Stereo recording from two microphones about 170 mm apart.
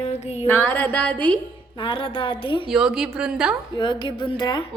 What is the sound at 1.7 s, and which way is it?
Speech, 30° left (ahead or behind).